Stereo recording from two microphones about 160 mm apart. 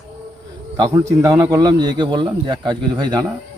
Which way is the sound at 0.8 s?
20° right (ahead or behind).